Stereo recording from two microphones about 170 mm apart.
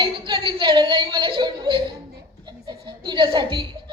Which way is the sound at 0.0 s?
30° right (ahead or behind).